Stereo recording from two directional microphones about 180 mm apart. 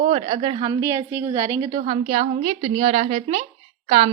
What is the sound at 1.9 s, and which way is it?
A woman's voice, 35° right (ahead or behind).